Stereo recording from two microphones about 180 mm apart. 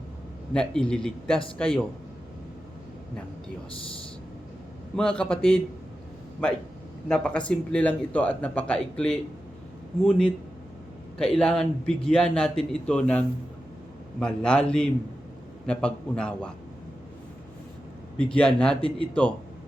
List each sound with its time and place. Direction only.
0.5 s a man's voice: 5° left (ahead or behind)
4.9 s a man's voice: 5° left (ahead or behind)
18.2 s a man's voice: 5° left (ahead or behind)